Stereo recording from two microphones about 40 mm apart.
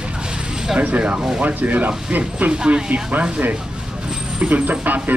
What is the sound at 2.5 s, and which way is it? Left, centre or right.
Speech, right.